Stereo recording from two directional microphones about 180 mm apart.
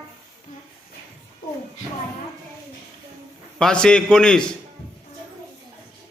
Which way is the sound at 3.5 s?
5° left (ahead or behind).